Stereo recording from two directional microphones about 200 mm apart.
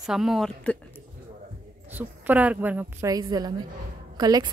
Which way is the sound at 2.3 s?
10° right (ahead or behind).